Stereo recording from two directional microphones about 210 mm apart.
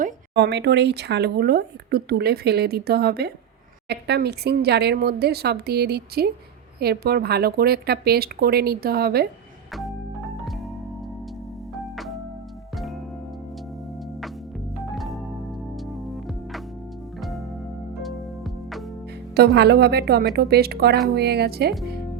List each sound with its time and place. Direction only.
0.3 s speech: 55° right (ahead or behind)
11.7 s organ: centre (ahead or behind)
12.7 s music: centre (ahead or behind)
14.9 s organ: centre (ahead or behind)
15.9 s music: centre (ahead or behind)
19.4 s speech: 50° right (ahead or behind)